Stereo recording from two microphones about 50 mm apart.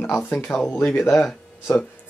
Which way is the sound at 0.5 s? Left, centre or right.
Left.